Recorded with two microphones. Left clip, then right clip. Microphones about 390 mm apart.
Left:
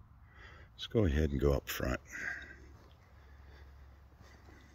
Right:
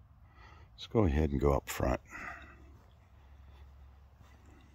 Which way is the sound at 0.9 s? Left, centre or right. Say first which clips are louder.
Right 2 dB; centre.